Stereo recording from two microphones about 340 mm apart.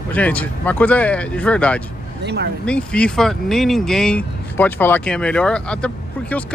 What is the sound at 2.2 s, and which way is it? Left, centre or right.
Speech, right.